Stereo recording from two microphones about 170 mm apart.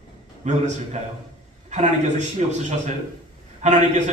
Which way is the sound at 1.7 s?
45° right (ahead or behind).